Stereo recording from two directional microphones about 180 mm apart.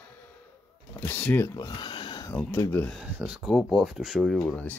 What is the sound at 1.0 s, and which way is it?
Speech, 10° left (ahead or behind).